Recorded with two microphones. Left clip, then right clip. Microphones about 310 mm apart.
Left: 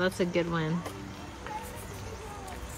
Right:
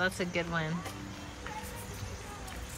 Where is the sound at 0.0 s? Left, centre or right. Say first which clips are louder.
Left 3 dB; centre.